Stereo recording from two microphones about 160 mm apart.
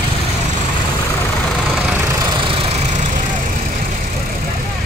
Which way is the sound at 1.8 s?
15° right (ahead or behind).